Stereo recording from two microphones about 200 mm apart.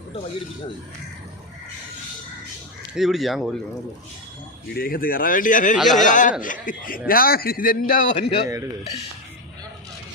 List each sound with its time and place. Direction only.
2.9 s speech: centre (ahead or behind)
4.8 s a man's voice: 45° left (ahead or behind)
5.7 s speech: centre (ahead or behind)
6.0 s a man's voice: 40° left (ahead or behind)
8.1 s a man's voice: 25° left (ahead or behind)